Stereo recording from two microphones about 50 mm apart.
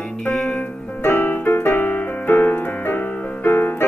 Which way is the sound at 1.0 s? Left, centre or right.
Left.